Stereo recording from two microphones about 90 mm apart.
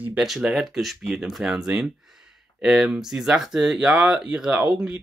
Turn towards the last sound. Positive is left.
turn(degrees=-10)  # may be behind; listen again after turning